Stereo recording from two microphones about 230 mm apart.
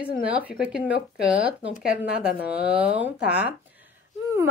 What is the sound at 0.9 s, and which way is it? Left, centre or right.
Speech, left.